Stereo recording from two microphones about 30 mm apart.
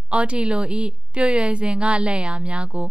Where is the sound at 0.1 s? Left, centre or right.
Right.